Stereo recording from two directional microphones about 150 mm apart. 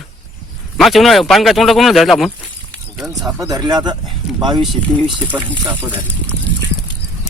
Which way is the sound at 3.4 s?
25° right (ahead or behind).